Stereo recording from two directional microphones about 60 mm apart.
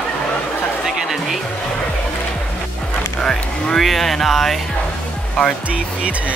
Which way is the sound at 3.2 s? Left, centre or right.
Centre.